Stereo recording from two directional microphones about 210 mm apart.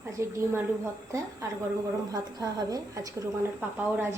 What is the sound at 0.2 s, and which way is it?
Speech, 15° right (ahead or behind).